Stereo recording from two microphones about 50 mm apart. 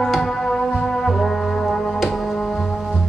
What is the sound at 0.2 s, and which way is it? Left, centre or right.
Music, centre.